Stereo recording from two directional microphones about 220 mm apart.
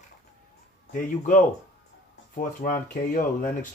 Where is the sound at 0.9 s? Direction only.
35° left (ahead or behind).